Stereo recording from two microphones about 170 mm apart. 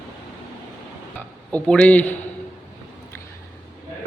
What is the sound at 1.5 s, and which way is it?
Speech, 5° left (ahead or behind).